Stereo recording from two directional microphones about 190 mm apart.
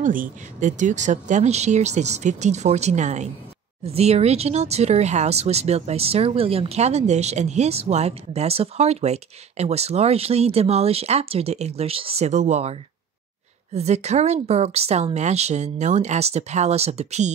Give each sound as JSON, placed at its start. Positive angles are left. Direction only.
{"t": 0.0, "sound": "speech", "side_deg": -45}
{"t": 13.7, "sound": "speech", "side_deg": -35}